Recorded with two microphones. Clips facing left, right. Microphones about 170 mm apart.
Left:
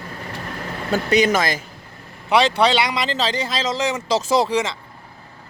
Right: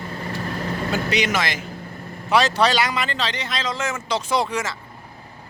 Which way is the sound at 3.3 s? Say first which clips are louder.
Left 5 dB; 30° left (ahead or behind).